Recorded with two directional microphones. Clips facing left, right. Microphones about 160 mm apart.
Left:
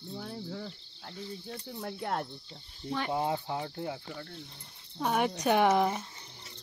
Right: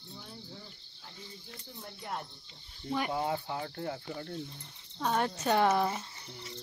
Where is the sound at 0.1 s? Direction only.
75° left (ahead or behind).